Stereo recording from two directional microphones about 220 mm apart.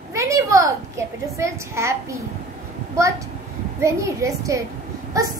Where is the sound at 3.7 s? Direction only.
15° right (ahead or behind).